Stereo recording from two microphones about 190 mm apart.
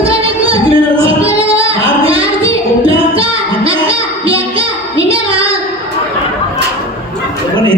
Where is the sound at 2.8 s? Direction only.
30° right (ahead or behind).